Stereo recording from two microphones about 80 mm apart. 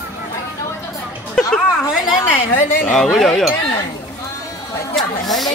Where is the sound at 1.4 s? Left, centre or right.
Centre.